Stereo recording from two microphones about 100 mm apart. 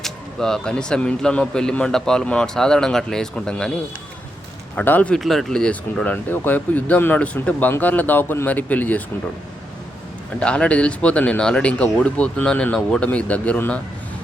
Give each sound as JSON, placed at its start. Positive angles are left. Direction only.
{"t": 0.0, "sound": "speech", "side_deg": 5}
{"t": 4.7, "sound": "speech", "side_deg": 15}
{"t": 5.2, "sound": "speech", "side_deg": 0}
{"t": 10.4, "sound": "speech", "side_deg": 10}